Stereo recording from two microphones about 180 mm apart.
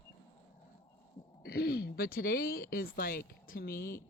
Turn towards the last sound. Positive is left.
turn(degrees=60)  # may be behind; listen again after turning